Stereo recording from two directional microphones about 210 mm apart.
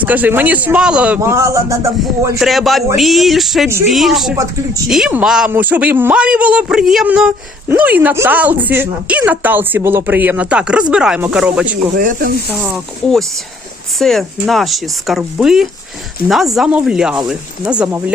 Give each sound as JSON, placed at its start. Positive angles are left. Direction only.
{"t": 0.0, "sound": "speech", "side_deg": -10}
{"t": 2.4, "sound": "speech", "side_deg": 0}
{"t": 11.9, "sound": "speech", "side_deg": -40}
{"t": 12.5, "sound": "speech", "side_deg": -5}